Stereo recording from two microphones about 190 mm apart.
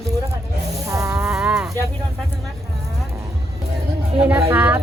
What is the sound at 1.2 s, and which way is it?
Livestock, 5° right (ahead or behind).